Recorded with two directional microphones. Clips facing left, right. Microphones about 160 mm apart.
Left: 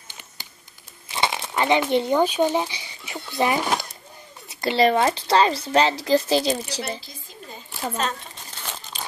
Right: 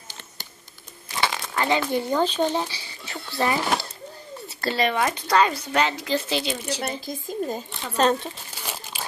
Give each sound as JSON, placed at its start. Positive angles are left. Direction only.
{"t": 1.1, "sound": "speech", "side_deg": 25}
{"t": 4.5, "sound": "a sound", "side_deg": 15}
{"t": 4.7, "sound": "speech", "side_deg": 30}
{"t": 6.8, "sound": "a woman's voice", "side_deg": -45}
{"t": 8.5, "sound": "crumpling", "side_deg": -10}